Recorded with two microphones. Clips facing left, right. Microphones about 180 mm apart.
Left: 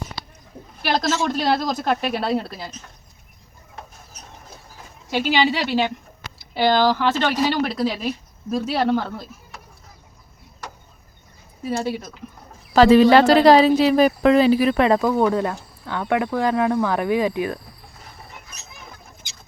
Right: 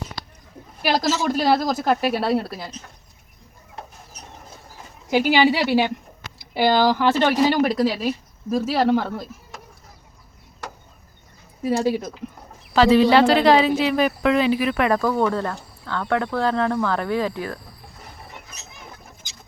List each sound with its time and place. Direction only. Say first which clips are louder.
0.9 s a woman's voice: right 1 dB; 5° right (ahead or behind)
5.1 s a woman's voice: right 3 dB; 10° right (ahead or behind)
11.7 s speech: right 4 dB; 15° right (ahead or behind)
12.7 s speech: left 3 dB; 45° left (ahead or behind)
14.9 s speech: left 2 dB; 15° left (ahead or behind)